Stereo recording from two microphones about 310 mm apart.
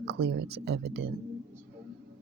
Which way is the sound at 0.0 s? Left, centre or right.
Right.